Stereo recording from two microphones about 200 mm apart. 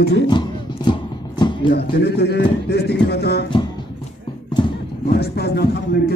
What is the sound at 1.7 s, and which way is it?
Music, 55° left (ahead or behind).